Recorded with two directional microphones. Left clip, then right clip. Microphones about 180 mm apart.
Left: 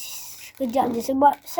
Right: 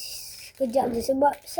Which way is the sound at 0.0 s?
10° left (ahead or behind).